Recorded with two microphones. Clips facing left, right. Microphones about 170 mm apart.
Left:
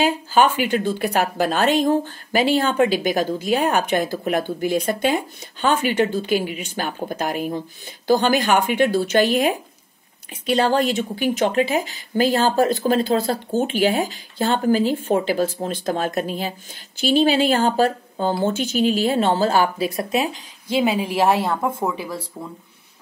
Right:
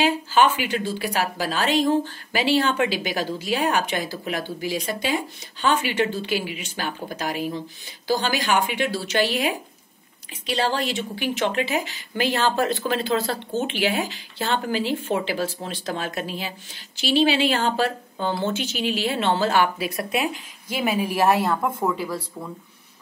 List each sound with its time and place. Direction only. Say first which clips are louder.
0.0 s a woman's voice: left 2 dB; 45° left (ahead or behind); by 21.5 s 25° left (ahead or behind)
21.5 s speech: left 1 dB; 10° left (ahead or behind)